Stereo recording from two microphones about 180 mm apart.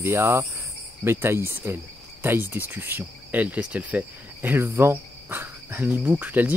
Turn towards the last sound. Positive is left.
turn(degrees=-10)  # may be behind; listen again after turning